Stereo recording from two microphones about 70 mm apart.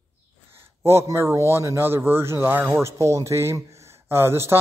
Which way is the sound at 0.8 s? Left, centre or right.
Right.